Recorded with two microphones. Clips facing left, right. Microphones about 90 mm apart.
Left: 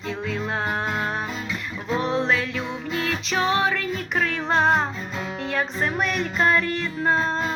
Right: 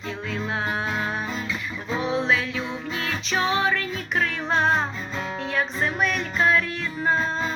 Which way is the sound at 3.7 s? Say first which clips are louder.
Even; 90° left.